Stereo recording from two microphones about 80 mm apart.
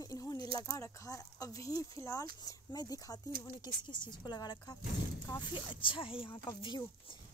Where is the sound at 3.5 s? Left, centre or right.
Left.